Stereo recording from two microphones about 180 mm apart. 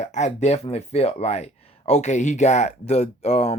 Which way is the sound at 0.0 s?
40° left (ahead or behind).